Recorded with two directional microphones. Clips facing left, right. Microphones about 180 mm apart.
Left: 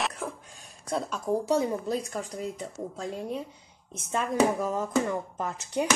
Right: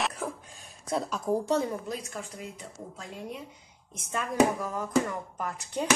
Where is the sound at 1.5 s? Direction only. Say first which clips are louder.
Left 4 dB; 15° left (ahead or behind).